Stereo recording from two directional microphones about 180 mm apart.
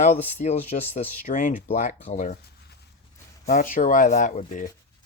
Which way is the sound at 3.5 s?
50° left (ahead or behind).